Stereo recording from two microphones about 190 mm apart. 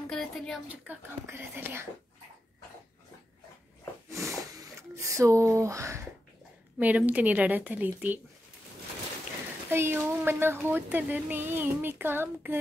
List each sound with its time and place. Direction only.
0.1 s a woman's voice: centre (ahead or behind)
0.8 s speech: 10° right (ahead or behind)
4.3 s a sound: 15° right (ahead or behind)
6.8 s speech: 10° right (ahead or behind)
9.7 s speech: 10° right (ahead or behind)